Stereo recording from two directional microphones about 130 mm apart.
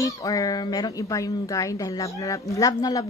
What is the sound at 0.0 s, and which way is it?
A woman's voice, 25° left (ahead or behind).